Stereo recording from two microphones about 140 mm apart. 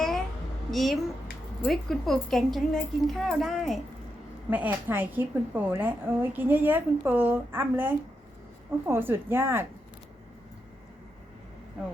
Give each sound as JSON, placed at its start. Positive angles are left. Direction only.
{"t": 0.7, "sound": "a woman's voice", "side_deg": 0}
{"t": 4.4, "sound": "a woman's voice", "side_deg": -10}